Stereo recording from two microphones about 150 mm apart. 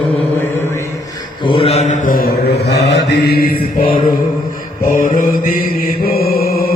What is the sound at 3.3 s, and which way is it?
Chant, 85° left.